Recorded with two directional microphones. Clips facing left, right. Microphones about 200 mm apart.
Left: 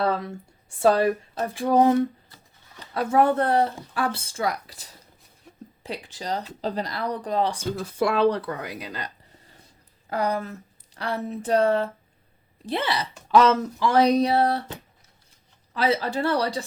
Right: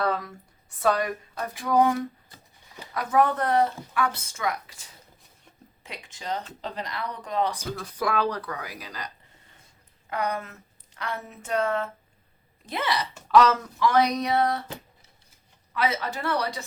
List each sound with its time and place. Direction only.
0.0 s speech: 25° left (ahead or behind)
2.3 s a sound: 15° right (ahead or behind)
2.9 s speech: 30° left (ahead or behind)
10.1 s speech: 35° left (ahead or behind)
15.7 s speech: 30° left (ahead or behind)